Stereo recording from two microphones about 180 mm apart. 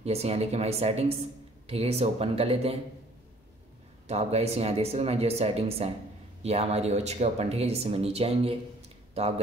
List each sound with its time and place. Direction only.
0.0 s speech: 35° right (ahead or behind)
4.1 s speech: 35° right (ahead or behind)